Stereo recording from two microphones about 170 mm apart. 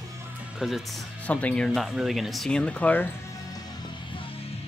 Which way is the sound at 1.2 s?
5° left (ahead or behind).